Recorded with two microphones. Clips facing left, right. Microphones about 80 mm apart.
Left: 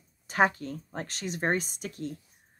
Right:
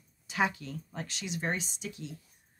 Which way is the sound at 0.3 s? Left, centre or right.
Left.